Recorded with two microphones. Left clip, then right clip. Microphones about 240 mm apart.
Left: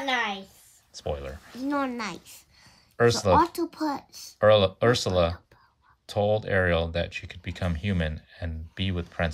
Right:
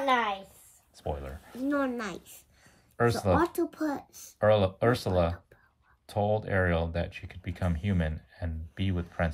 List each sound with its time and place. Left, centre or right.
0.9 s speech: centre
1.6 s a woman's voice: left
3.0 s speech: centre
3.3 s a child's voice: left
4.4 s speech: centre